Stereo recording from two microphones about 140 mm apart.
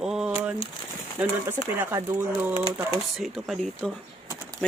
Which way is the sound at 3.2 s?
Centre (ahead or behind).